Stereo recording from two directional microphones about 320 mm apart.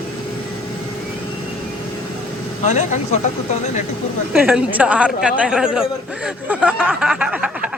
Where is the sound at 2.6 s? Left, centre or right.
Left.